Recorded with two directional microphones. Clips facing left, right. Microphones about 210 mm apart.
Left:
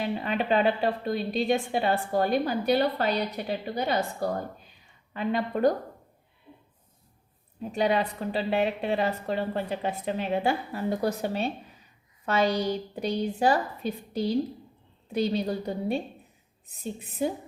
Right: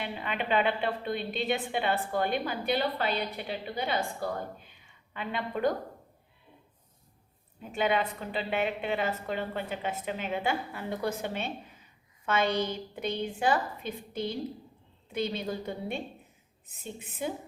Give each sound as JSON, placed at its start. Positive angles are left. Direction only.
{"t": 0.0, "sound": "a woman's voice", "side_deg": 40}
{"t": 7.6, "sound": "a woman's voice", "side_deg": 40}
{"t": 17.0, "sound": "a woman's voice", "side_deg": 40}